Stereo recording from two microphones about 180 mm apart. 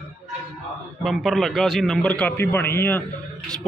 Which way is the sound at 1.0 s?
Centre (ahead or behind).